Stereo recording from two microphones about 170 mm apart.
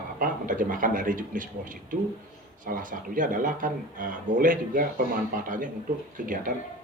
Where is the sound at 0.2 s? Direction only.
50° right (ahead or behind).